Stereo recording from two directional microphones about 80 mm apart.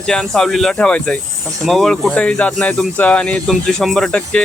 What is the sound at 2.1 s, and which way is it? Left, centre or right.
Speech, centre.